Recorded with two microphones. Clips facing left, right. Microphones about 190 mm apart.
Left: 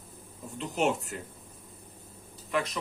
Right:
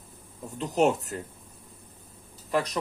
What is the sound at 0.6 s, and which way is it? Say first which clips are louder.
Speech: right 5 dB; 40° right (ahead or behind).